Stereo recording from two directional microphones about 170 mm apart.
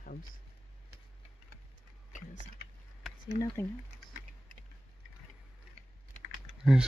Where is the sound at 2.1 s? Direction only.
45° left (ahead or behind).